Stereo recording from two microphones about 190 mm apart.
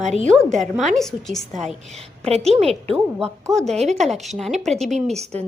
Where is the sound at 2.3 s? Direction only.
30° right (ahead or behind).